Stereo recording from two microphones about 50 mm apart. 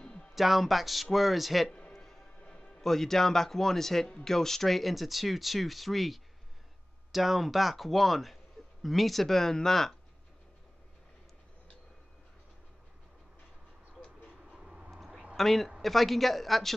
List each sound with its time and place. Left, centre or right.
0.0 s music: centre
0.3 s speech: centre
1.7 s music: centre
2.4 s music: left
2.8 s a man's voice: centre
14.6 s a sound: centre
15.3 s a man's voice: centre